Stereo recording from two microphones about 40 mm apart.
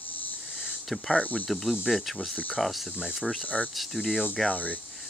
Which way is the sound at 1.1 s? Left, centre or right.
Left.